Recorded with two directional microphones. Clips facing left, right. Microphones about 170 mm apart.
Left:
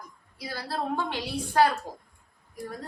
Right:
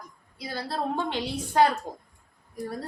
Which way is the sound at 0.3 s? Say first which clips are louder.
Right 2 dB; 20° right (ahead or behind).